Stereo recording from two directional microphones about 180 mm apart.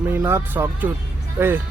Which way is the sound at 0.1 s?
15° right (ahead or behind).